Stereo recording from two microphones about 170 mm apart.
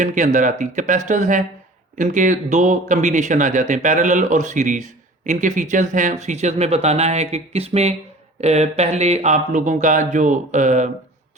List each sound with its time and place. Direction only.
0.0 s speech: 50° right (ahead or behind)